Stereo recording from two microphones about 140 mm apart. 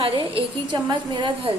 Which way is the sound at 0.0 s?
35° right (ahead or behind).